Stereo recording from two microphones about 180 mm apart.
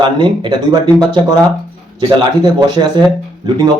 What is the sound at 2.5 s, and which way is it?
Speech, 25° right (ahead or behind).